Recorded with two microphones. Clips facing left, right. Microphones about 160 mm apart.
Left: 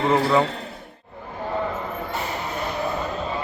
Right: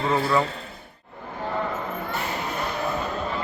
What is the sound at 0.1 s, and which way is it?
Speech, 20° left (ahead or behind).